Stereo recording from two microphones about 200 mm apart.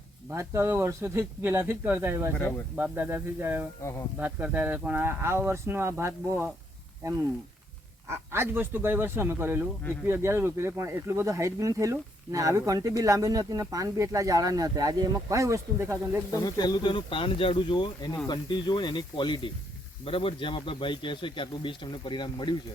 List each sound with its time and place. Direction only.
0.3 s speech: 15° right (ahead or behind)
8.0 s speech: 10° right (ahead or behind)
16.3 s a man's voice: 20° left (ahead or behind)